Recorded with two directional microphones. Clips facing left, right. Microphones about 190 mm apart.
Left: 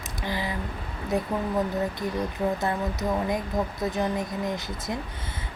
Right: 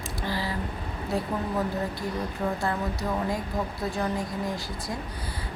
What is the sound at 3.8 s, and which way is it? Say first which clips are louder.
Speech: left 2 dB; 20° left (ahead or behind).